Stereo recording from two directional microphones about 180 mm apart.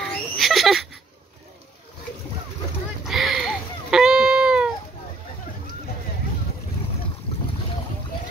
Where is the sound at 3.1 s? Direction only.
Centre (ahead or behind).